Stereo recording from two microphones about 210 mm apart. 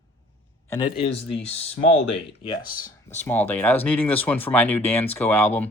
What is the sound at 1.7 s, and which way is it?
Speech, 60° left (ahead or behind).